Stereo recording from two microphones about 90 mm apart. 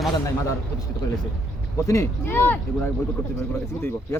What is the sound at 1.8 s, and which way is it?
Speech, 35° left (ahead or behind).